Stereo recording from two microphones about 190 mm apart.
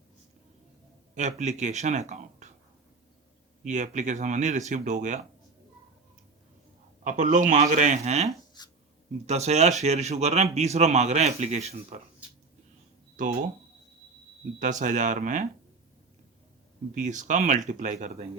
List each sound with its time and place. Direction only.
1.1 s speech: 40° right (ahead or behind)
3.6 s speech: 40° right (ahead or behind)
7.0 s speech: 40° right (ahead or behind)
8.6 s speech: 20° left (ahead or behind)
9.2 s speech: 35° right (ahead or behind)
14.6 s speech: 40° right (ahead or behind)
16.9 s speech: 40° right (ahead or behind)